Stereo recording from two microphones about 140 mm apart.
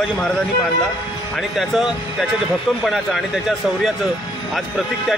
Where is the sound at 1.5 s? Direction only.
Centre (ahead or behind).